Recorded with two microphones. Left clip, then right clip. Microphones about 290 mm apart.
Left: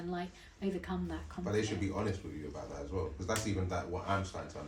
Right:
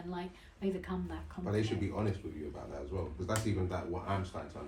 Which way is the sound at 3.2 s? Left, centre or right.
Left.